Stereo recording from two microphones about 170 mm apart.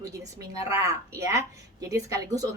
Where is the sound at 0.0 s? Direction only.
20° right (ahead or behind).